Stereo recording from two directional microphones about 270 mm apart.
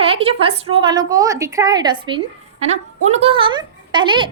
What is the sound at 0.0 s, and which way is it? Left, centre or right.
A woman's voice, right.